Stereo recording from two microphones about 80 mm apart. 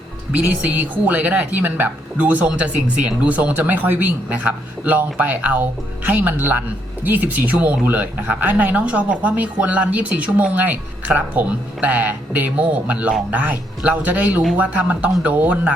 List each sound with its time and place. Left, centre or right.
0.4 s speech: right